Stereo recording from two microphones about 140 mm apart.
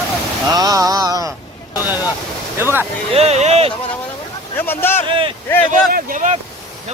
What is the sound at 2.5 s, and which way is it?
Speech, 15° right (ahead or behind).